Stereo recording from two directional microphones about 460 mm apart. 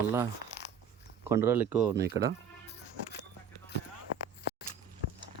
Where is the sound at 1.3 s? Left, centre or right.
Centre.